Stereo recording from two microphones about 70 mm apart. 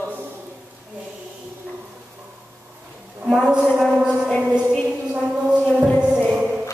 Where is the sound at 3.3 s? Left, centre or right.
Centre.